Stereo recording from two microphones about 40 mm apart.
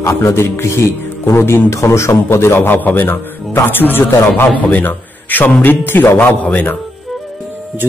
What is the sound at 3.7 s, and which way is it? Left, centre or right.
Speech, left.